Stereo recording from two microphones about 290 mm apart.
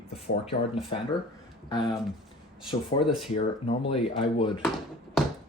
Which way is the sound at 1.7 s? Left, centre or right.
Centre.